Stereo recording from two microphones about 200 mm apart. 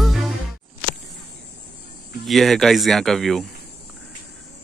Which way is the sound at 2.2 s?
Centre (ahead or behind).